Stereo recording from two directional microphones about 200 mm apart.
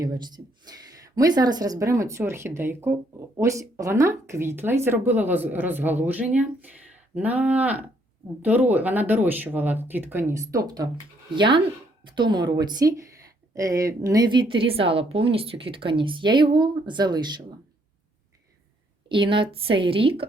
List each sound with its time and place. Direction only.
0.0 s a woman's voice: 20° right (ahead or behind)
19.0 s a woman's voice: 25° right (ahead or behind)